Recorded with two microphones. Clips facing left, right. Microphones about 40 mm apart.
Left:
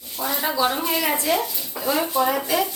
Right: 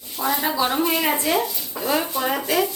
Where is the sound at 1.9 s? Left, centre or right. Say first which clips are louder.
Left 2 dB; centre.